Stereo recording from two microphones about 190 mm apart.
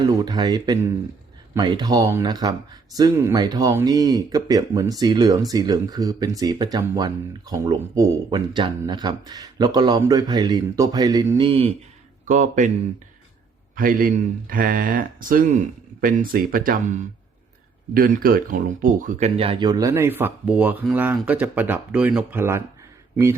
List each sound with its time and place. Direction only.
0.3 s speech: 20° right (ahead or behind)
12.3 s speech: 40° right (ahead or behind)
13.7 s speech: 45° right (ahead or behind)
19.4 s speech: 25° right (ahead or behind)